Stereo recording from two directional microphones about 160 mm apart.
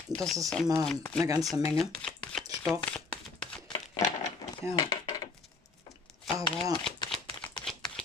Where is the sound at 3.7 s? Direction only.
25° left (ahead or behind).